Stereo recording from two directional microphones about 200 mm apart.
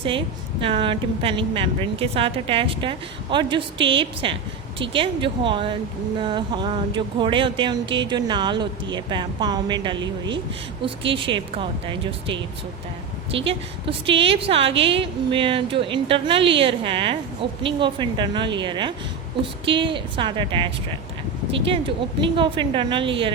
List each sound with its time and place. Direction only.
0.6 s a woman's voice: 25° right (ahead or behind)
10.0 s a woman's voice: 65° right (ahead or behind)
10.8 s a woman's voice: 25° right (ahead or behind)
13.4 s a woman's voice: 25° right (ahead or behind)